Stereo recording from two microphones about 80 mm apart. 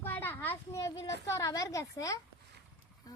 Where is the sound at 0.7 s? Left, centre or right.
Left.